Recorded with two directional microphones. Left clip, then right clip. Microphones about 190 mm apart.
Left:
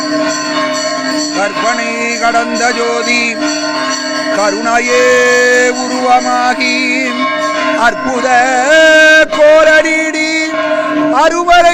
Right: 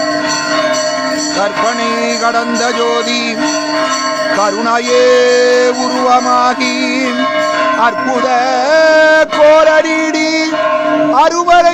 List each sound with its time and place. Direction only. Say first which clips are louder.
4.7 s speech: even; 5° right (ahead or behind)
7.8 s music: even; centre (ahead or behind)
11.1 s speech: left 1 dB; 5° right (ahead or behind)